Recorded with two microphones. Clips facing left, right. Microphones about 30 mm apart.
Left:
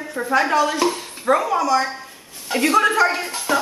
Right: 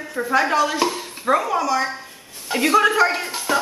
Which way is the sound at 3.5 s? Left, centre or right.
Centre.